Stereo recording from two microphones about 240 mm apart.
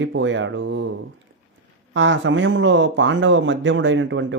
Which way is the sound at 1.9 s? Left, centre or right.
Right.